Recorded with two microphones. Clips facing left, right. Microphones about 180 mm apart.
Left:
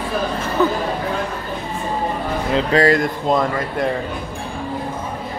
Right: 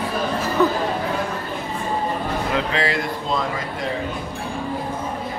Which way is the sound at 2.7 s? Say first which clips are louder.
Left 8 dB; 45° left (ahead or behind).